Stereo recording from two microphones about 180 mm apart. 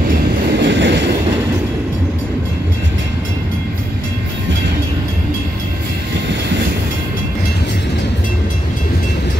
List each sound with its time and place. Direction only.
0.5 s train: 70° right (ahead or behind)